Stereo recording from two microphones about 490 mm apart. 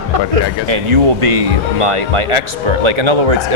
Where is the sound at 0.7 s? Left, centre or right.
Right.